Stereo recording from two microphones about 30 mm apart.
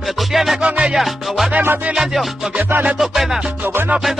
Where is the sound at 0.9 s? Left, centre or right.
Centre.